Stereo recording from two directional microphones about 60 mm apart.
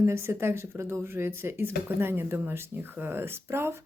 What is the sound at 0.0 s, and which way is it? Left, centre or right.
Speech, right.